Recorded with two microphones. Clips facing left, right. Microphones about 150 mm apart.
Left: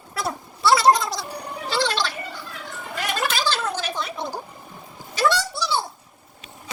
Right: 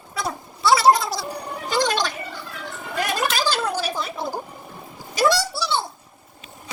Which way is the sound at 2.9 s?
15° right (ahead or behind).